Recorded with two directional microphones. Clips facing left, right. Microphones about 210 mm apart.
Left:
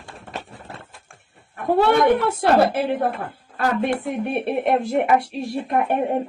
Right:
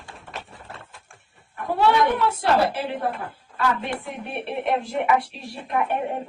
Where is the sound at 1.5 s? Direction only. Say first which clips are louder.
Left 3 dB; 55° left (ahead or behind).